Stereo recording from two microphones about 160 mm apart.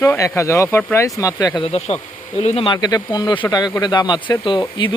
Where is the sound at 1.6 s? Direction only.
40° left (ahead or behind).